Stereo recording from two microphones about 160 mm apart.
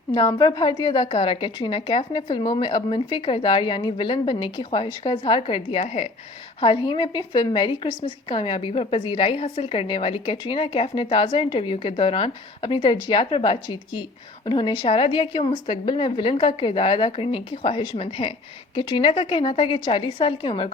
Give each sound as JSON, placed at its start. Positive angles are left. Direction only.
{"t": 0.1, "sound": "a woman's voice", "side_deg": 25}